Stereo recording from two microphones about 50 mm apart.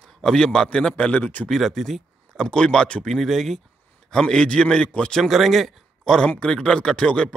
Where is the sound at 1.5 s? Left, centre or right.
Centre.